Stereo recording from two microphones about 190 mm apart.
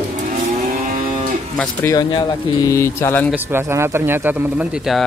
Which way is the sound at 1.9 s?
20° left (ahead or behind).